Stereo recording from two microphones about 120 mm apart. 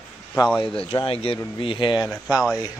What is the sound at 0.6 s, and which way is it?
Speech, 50° left (ahead or behind).